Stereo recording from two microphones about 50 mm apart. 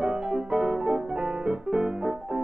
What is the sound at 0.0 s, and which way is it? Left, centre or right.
Piano, centre.